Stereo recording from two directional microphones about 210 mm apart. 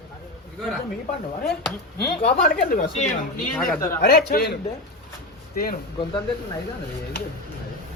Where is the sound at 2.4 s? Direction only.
40° left (ahead or behind).